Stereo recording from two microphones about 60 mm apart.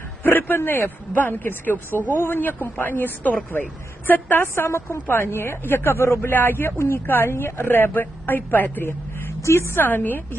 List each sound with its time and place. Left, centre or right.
0.2 s speech: left
9.4 s speech: left